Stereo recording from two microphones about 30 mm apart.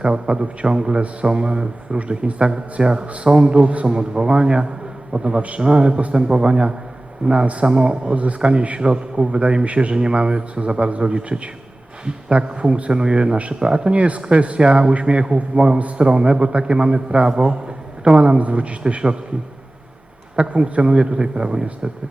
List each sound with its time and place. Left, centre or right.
0.0 s a man's voice: right
3.8 s a man's voice: right
7.2 s a man's voice: right
7.6 s a man's voice: right
9.9 s a man's voice: right
13.9 s a man's voice: right
20.3 s a man's voice: right